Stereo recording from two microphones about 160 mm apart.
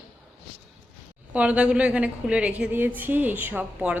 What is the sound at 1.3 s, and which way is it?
A woman's voice, 10° right (ahead or behind).